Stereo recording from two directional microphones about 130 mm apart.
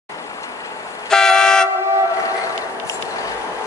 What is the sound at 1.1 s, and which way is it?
Vehicle, 5° left (ahead or behind).